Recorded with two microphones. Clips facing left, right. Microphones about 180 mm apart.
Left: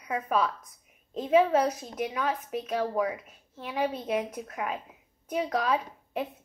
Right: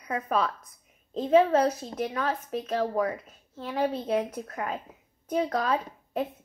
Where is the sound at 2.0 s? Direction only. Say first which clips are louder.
Even; 10° left (ahead or behind).